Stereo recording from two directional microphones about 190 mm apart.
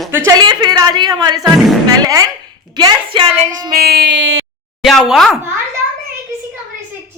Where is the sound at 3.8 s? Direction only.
55° right (ahead or behind); by 4.4 s 80° right.